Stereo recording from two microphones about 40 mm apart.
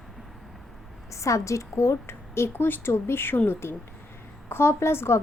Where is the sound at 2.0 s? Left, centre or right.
Left.